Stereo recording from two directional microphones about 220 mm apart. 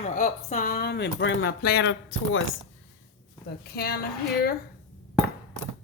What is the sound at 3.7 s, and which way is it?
Speech, 45° left (ahead or behind).